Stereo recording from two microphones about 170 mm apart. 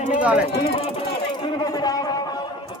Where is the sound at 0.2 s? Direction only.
5° right (ahead or behind).